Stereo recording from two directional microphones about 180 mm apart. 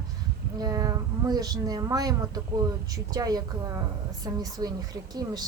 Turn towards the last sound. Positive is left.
turn(degrees=-20)  # may be behind; listen again after turning